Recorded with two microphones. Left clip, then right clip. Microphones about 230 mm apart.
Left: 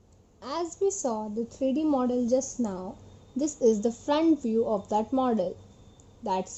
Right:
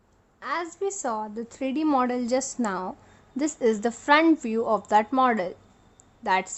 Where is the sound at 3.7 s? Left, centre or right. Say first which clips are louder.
Right 3 dB; right.